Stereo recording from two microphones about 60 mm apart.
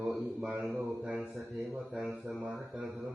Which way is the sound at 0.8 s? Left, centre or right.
Right.